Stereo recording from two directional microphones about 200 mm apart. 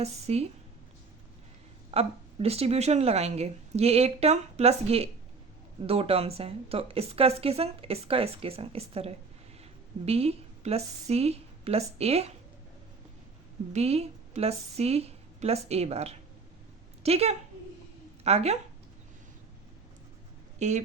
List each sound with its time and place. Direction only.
0.0 s a woman's voice: 30° right (ahead or behind)
1.9 s a woman's voice: 30° right (ahead or behind)
13.7 s a woman's voice: 30° right (ahead or behind)
20.6 s speech: 35° right (ahead or behind)